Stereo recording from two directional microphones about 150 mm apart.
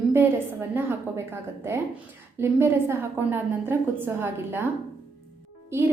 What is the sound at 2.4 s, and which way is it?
A woman's voice, 15° right (ahead or behind).